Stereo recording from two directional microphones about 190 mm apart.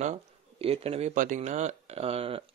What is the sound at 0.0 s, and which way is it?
A man's voice, 35° right (ahead or behind).